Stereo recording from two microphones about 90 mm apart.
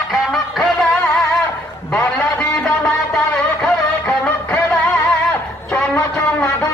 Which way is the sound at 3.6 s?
10° left (ahead or behind).